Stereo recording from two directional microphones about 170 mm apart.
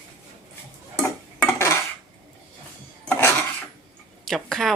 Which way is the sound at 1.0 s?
15° left (ahead or behind).